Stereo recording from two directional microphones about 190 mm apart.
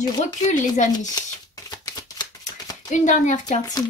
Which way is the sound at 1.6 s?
20° left (ahead or behind).